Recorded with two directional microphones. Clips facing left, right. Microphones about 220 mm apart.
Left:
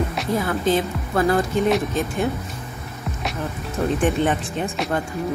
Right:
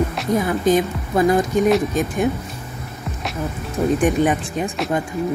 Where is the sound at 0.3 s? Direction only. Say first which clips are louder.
Right 3 dB; 15° right (ahead or behind).